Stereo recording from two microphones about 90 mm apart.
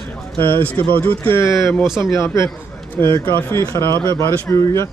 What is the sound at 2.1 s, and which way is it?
Speech, 35° left (ahead or behind).